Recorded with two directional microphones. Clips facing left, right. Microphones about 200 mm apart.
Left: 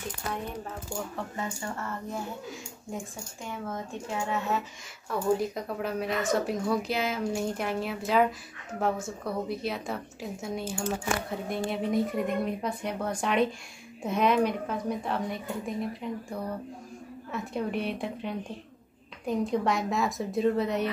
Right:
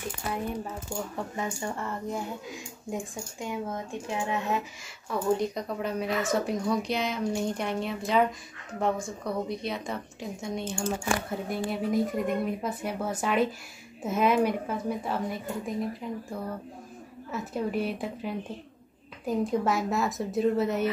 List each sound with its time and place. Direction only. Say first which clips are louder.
1.1 s speech: right 2 dB; 15° right (ahead or behind)
3.4 s speech: right 2 dB; 15° right (ahead or behind)
5.4 s speech: right 1 dB; 5° left (ahead or behind)